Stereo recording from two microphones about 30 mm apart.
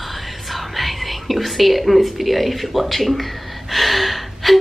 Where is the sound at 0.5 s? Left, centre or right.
Centre.